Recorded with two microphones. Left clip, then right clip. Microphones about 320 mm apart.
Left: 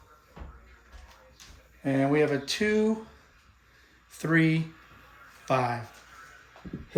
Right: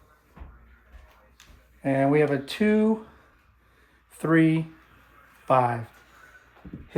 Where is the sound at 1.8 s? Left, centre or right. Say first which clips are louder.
Right 3 dB; centre.